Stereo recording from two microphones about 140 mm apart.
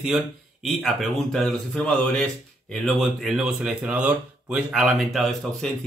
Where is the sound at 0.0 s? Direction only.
Centre (ahead or behind).